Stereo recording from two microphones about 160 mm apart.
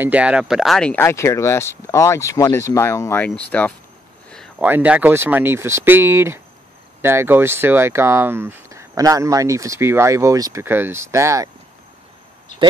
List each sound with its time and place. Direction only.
0.0 s speech: 10° right (ahead or behind); by 3.7 s 10° left (ahead or behind)
4.6 s speech: 10° right (ahead or behind)